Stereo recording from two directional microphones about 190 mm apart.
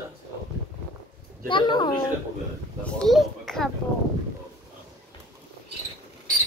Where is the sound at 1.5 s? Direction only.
20° left (ahead or behind).